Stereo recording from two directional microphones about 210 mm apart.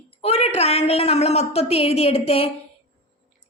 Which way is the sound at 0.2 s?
30° left (ahead or behind).